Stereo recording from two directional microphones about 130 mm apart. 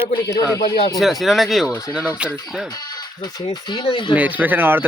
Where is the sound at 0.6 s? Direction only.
35° left (ahead or behind).